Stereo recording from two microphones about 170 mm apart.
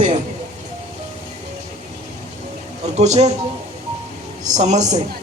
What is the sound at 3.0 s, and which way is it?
Speech, 40° right (ahead or behind).